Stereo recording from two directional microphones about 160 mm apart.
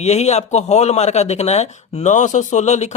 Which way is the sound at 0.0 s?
45° left (ahead or behind).